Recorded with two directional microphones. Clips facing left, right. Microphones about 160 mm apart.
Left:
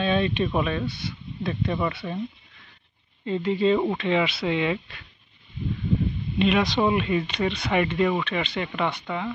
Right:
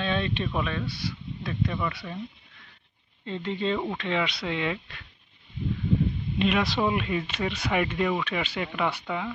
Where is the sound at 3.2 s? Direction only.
10° left (ahead or behind).